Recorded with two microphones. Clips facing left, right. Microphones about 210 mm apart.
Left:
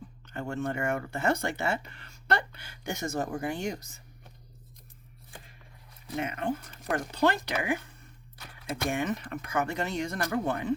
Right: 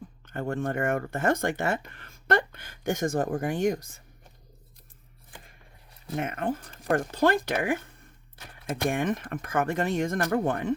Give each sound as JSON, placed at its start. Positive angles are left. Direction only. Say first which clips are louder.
{"t": 0.3, "sound": "speech", "louder": "right 3 dB", "side_deg": -50}
{"t": 6.1, "sound": "speech", "louder": "right 2 dB", "side_deg": -50}